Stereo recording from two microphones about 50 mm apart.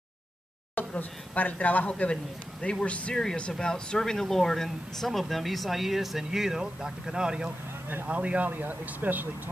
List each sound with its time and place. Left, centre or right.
0.7 s speech: left; by 7.5 s centre
8.1 s speech: right